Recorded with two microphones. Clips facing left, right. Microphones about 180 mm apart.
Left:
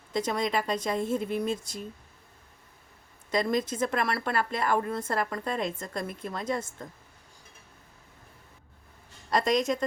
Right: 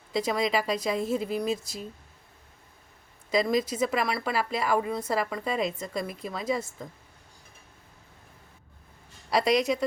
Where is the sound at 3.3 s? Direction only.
Centre (ahead or behind).